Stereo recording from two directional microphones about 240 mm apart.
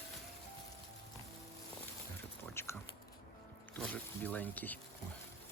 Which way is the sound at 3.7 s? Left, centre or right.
Centre.